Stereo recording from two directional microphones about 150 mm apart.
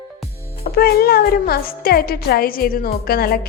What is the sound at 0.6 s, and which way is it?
Speech, 90° left.